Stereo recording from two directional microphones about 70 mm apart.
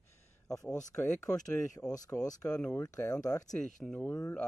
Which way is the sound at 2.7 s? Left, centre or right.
Left.